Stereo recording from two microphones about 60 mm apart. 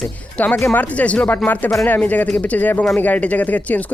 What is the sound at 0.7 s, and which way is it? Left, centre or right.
Speech, left.